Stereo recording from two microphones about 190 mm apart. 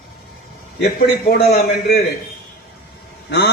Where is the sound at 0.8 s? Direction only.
55° left (ahead or behind).